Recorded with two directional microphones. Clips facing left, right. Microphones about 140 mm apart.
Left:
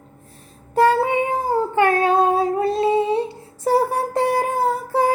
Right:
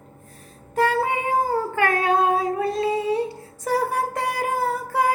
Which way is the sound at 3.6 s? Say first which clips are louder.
Left 4 dB; 30° left (ahead or behind).